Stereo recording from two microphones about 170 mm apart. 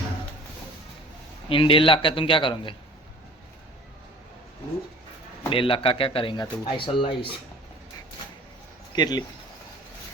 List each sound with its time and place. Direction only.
1.5 s a man's voice: 30° left (ahead or behind)
5.5 s a man's voice: 30° left (ahead or behind)
9.0 s speech: 25° left (ahead or behind)